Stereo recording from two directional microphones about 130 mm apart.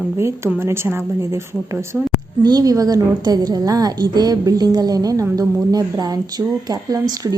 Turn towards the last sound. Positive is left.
turn(degrees=-30)  # may be behind; listen again after turning